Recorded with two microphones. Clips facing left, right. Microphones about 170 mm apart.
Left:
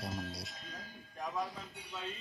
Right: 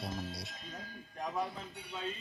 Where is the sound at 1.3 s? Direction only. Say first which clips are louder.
Right 2 dB; 20° right (ahead or behind).